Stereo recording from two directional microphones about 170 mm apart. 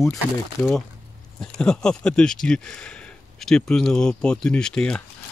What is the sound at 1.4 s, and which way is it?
Speech, 5° left (ahead or behind).